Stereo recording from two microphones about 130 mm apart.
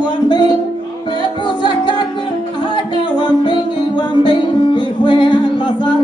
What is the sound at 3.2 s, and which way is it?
Music, 35° left (ahead or behind).